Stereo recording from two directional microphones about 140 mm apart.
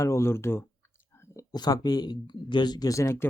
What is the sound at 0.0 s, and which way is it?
Speech, 20° left (ahead or behind).